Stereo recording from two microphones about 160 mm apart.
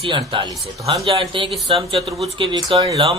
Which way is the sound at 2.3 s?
30° right (ahead or behind).